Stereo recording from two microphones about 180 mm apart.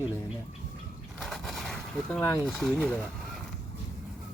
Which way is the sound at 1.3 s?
Centre (ahead or behind).